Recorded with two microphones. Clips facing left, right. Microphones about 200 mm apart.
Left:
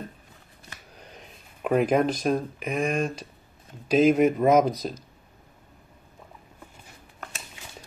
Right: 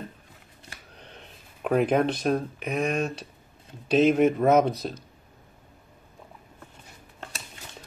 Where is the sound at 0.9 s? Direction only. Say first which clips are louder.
Even; 5° left (ahead or behind).